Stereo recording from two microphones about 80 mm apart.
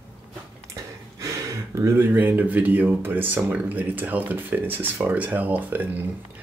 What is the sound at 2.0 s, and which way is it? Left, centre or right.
Speech, right.